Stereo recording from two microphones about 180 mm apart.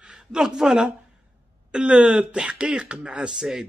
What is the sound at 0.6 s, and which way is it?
Speech, 5° right (ahead or behind).